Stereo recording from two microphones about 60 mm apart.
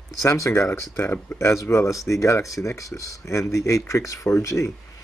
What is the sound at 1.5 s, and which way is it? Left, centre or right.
Speech, left.